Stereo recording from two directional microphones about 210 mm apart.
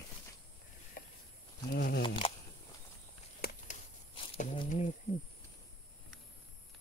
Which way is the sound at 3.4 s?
45° left (ahead or behind).